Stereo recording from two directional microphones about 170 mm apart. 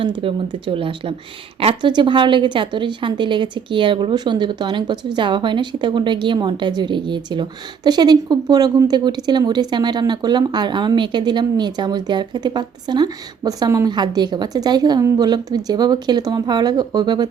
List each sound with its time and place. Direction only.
0.0 s a woman's voice: 30° right (ahead or behind)